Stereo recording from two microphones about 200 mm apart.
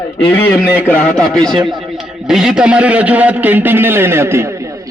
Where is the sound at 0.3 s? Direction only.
10° left (ahead or behind).